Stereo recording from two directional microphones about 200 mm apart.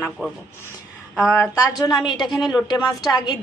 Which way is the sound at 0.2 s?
10° right (ahead or behind).